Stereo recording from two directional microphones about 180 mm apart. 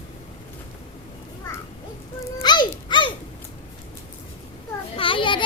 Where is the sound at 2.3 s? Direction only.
25° left (ahead or behind).